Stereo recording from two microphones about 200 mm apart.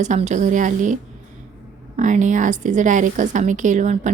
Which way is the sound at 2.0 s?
40° right (ahead or behind).